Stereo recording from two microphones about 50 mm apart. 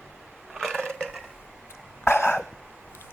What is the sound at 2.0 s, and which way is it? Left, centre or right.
Cough, left.